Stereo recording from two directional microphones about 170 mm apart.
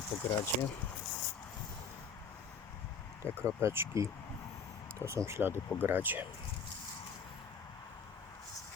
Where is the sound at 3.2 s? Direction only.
10° left (ahead or behind).